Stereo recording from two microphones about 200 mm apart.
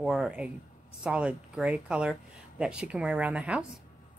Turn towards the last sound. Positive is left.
turn(degrees=-5)  # may be behind; listen again after turning